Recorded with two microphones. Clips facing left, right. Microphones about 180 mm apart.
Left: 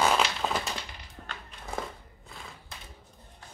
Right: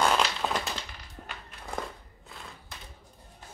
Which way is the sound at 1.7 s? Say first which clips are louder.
Even; centre (ahead or behind).